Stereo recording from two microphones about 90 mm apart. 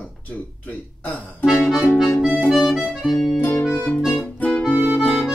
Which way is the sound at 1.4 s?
5° right (ahead or behind).